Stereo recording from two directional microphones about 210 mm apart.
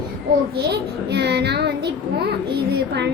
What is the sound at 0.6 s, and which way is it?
A child's voice, 50° right (ahead or behind).